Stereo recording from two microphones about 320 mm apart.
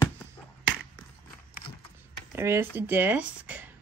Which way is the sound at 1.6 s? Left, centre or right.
Left.